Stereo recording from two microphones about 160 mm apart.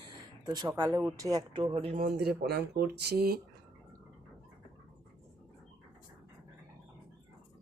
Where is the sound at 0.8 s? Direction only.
10° right (ahead or behind); by 1.9 s 35° right (ahead or behind).